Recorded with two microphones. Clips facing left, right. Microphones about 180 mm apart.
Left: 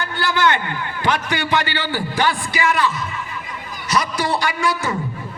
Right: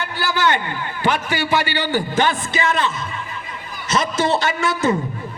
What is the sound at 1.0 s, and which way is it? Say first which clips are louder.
A man's voice: right 1 dB; 10° right (ahead or behind).